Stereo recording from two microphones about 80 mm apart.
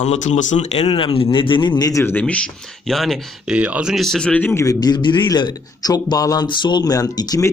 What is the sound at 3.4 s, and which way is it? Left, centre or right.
Speech, centre.